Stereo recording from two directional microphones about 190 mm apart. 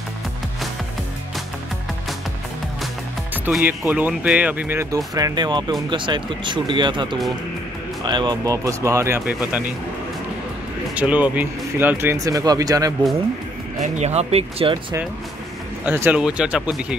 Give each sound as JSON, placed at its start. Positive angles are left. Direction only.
{"t": 3.4, "sound": "speech", "side_deg": -10}
{"t": 11.0, "sound": "speech", "side_deg": -5}
{"t": 13.7, "sound": "speech", "side_deg": -40}
{"t": 15.8, "sound": "speech", "side_deg": -10}